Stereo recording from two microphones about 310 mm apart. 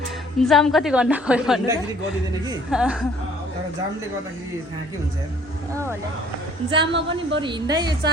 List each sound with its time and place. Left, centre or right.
0.3 s a woman's voice: centre
6.7 s a woman's voice: centre
7.1 s speech: right
7.4 s a woman's voice: centre